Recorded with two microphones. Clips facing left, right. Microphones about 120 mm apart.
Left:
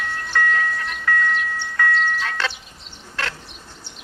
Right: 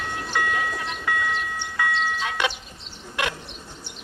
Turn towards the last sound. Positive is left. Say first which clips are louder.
# right 2 dB
turn(degrees=-15)  # may be behind; listen again after turning